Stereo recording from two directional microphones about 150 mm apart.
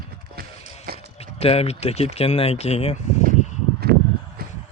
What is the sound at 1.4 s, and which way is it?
Speech, 45° left (ahead or behind).